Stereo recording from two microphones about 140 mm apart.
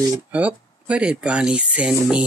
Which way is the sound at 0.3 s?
10° right (ahead or behind).